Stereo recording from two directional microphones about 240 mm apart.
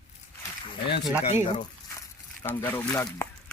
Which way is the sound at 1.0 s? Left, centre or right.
Centre.